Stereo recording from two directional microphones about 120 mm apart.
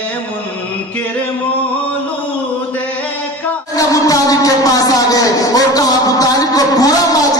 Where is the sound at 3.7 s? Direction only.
30° left (ahead or behind).